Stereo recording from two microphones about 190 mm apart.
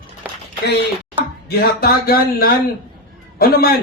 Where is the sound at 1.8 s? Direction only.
50° left (ahead or behind).